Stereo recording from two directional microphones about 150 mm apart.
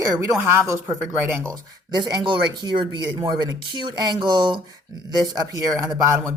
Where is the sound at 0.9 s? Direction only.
15° right (ahead or behind).